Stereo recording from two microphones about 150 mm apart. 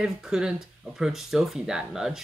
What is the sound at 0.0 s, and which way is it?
Speech, 5° right (ahead or behind).